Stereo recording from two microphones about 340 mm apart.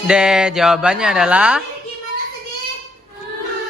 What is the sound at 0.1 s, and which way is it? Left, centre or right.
Mantra, centre.